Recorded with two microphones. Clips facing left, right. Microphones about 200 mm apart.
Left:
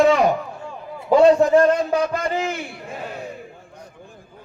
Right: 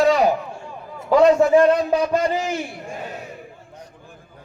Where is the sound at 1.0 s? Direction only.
30° left (ahead or behind).